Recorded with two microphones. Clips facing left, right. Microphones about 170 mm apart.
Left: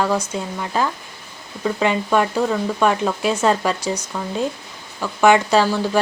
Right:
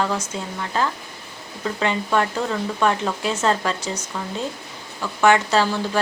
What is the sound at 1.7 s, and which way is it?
Speech, 10° left (ahead or behind).